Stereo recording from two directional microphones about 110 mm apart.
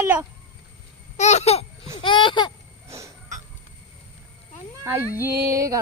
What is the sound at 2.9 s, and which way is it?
Cough, 30° right (ahead or behind).